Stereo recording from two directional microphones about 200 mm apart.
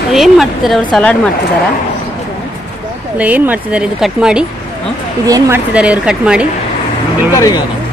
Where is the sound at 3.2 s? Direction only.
10° right (ahead or behind).